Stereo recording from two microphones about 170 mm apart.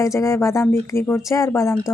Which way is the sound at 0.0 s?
15° left (ahead or behind).